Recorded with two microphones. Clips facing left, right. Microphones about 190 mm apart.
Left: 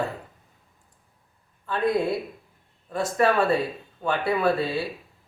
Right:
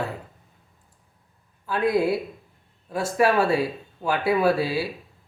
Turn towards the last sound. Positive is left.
turn(degrees=-5)  # may be behind; listen again after turning